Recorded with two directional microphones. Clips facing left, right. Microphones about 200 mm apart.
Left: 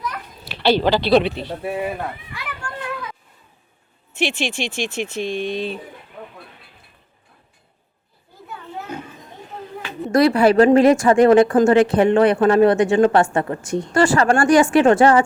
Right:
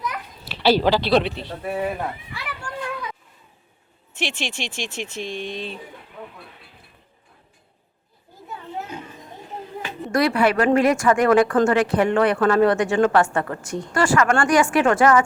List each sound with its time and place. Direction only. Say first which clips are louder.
0.1 s children playing: even; centre (ahead or behind)
2.3 s a sound: even; 5° right (ahead or behind)
4.2 s speech: left 6 dB; 10° left (ahead or behind)
4.7 s speech: left 6 dB; 55° left (ahead or behind)
5.5 s speech: left 6 dB; 10° left (ahead or behind)
10.1 s speech: left 5 dB; 30° left (ahead or behind)